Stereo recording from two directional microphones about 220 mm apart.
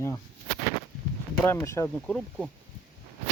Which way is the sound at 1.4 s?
10° left (ahead or behind).